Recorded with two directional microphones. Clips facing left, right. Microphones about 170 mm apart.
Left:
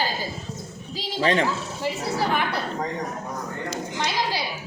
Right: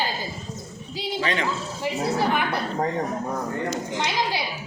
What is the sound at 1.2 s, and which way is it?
Speech, 40° left (ahead or behind).